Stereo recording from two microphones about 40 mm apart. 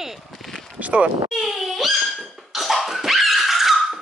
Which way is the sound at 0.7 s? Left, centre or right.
Right.